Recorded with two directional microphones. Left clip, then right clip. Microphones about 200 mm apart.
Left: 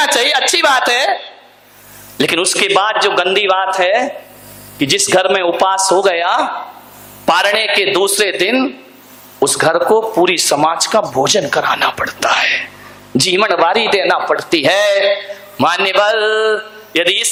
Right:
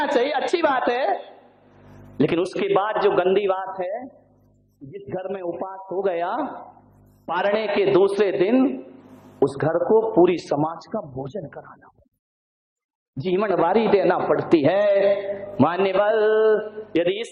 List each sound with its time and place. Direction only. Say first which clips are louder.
0.0 s a man's voice: left 9 dB; 10° left (ahead or behind)
5.0 s a man's voice: left 14 dB; 15° left (ahead or behind)
6.0 s a man's voice: left 11 dB; 10° left (ahead or behind)
13.2 s a man's voice: left 8 dB; 10° left (ahead or behind)